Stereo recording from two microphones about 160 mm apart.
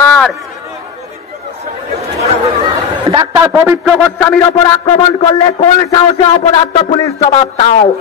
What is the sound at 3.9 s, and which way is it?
Speech, centre (ahead or behind).